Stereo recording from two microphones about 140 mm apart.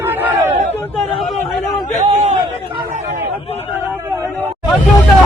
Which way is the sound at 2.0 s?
55° right (ahead or behind).